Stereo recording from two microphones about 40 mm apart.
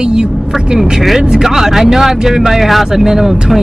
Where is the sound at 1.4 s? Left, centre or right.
Centre.